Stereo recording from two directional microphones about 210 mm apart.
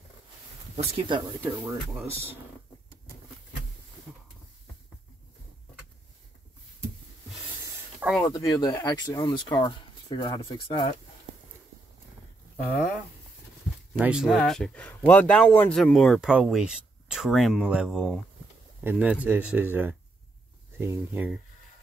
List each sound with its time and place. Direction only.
0.9 s speech: 20° right (ahead or behind)
1.4 s speech: 10° right (ahead or behind)
8.3 s speech: 15° left (ahead or behind)
12.5 s speech: 5° left (ahead or behind)